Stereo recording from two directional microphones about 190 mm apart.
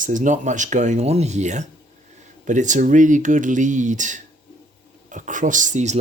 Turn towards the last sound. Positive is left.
turn(degrees=-40)  # may be behind; listen again after turning